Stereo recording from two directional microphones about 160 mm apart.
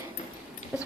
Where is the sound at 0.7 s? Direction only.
10° right (ahead or behind).